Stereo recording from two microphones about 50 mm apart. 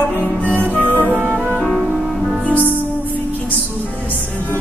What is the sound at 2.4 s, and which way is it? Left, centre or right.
Music, right.